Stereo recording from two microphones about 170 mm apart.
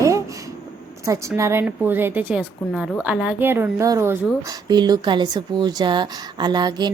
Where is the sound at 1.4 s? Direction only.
15° right (ahead or behind).